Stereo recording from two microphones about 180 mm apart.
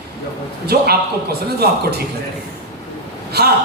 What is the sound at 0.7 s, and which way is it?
Speech, 60° right (ahead or behind).